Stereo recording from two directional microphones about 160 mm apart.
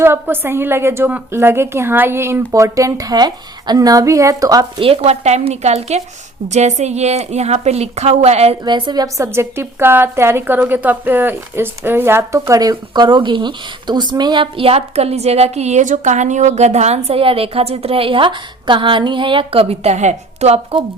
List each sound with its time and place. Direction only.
0.0 s a woman's voice: 15° right (ahead or behind)
4.8 s a woman's voice: 35° right (ahead or behind)
8.6 s a woman's voice: 25° right (ahead or behind)